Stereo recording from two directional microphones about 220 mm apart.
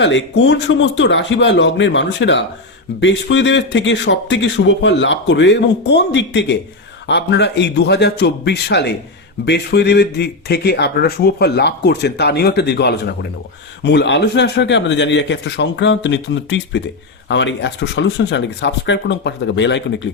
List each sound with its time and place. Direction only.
0.0 s speech: 55° left (ahead or behind)